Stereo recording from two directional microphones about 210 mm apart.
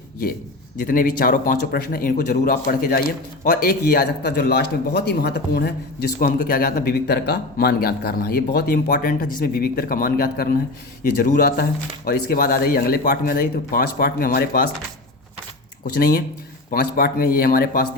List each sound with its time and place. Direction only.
0.8 s a man's voice: 40° left (ahead or behind)
15.8 s a man's voice: 45° left (ahead or behind)